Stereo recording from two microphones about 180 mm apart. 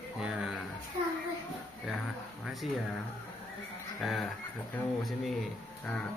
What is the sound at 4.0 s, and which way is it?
Speech, centre (ahead or behind).